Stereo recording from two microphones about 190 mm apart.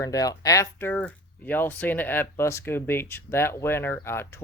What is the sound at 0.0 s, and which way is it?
Speech, 20° left (ahead or behind).